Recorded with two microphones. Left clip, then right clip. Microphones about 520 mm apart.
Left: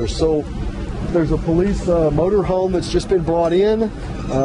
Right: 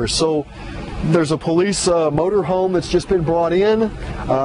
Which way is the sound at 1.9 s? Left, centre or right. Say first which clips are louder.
Right 1 dB; right.